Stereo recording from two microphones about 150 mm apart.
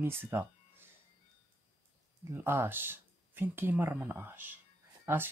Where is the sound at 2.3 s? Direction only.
15° right (ahead or behind).